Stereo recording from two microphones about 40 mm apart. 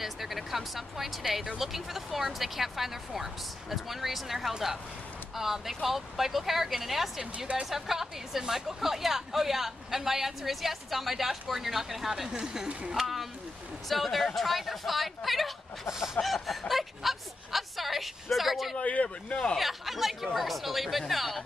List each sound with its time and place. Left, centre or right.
0.0 s speech: centre
7.3 s speech: right
7.7 s a woman's voice: centre
12.3 s speech: centre
12.9 s a woman's voice: centre
18.8 s speech: left
19.5 s speech: centre